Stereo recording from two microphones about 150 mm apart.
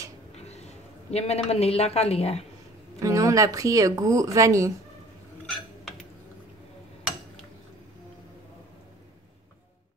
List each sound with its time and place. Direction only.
0.3 s a man's voice: 45° left (ahead or behind)
3.0 s speech: 20° right (ahead or behind)